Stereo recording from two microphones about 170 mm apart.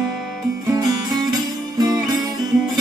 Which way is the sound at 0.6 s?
20° right (ahead or behind).